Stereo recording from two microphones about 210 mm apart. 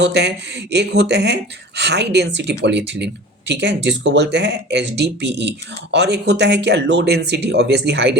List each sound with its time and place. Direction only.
0.0 s speech: 55° right (ahead or behind)